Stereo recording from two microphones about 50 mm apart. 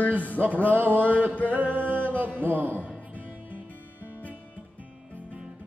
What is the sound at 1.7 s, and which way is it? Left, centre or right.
Music, right.